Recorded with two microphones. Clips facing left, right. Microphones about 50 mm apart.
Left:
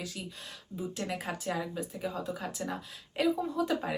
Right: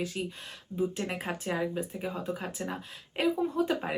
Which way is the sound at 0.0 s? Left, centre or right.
Right.